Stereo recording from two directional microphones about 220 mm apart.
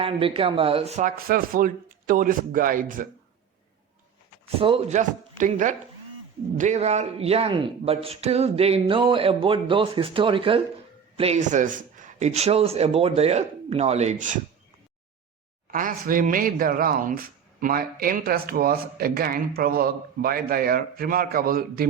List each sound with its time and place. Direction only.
0.0 s a man's voice: 25° right (ahead or behind)
4.6 s a man's voice: 30° right (ahead or behind)
15.7 s a man's voice: 40° right (ahead or behind)